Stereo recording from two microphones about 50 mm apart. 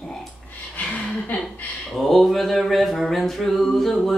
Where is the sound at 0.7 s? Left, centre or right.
Left.